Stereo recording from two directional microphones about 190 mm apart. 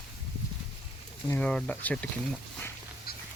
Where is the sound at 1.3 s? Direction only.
5° left (ahead or behind).